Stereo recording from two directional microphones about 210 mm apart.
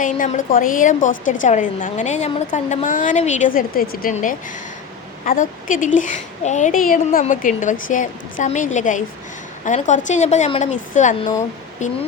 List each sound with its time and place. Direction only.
0.0 s a woman's voice: 40° left (ahead or behind)